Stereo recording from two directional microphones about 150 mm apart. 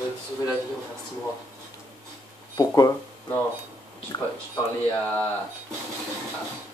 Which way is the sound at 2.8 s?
25° left (ahead or behind).